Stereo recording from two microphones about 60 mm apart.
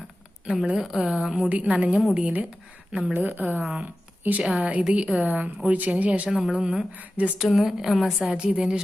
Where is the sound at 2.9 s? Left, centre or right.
Centre.